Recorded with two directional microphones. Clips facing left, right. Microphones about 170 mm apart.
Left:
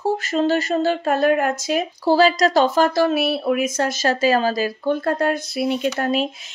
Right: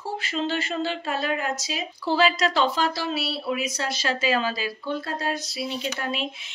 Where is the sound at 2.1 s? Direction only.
40° left (ahead or behind).